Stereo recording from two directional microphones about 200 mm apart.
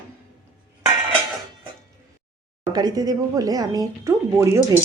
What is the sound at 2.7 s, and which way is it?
Speech, 20° right (ahead or behind).